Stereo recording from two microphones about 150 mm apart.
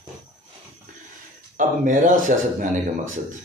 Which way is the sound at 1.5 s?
60° right (ahead or behind).